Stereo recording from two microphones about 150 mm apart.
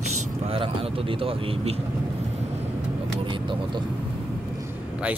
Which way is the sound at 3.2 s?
35° right (ahead or behind).